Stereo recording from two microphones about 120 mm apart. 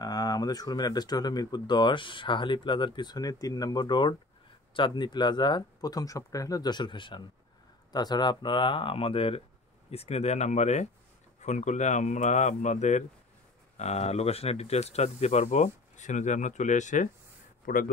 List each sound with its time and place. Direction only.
0.0 s speech: 35° left (ahead or behind); by 10.9 s 70° left (ahead or behind)
11.4 s speech: 85° left
13.7 s speech: 65° left (ahead or behind); by 17.1 s 90° left